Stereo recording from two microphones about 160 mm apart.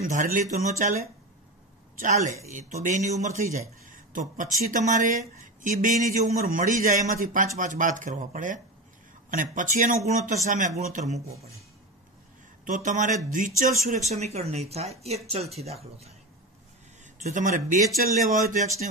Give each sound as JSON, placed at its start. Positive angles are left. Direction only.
{"t": 0.0, "sound": "speech", "side_deg": -55}
{"t": 2.0, "sound": "a man's voice", "side_deg": -50}
{"t": 12.6, "sound": "a man's voice", "side_deg": -50}